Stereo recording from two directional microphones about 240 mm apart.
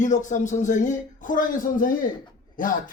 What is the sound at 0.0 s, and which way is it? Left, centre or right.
Speech, left.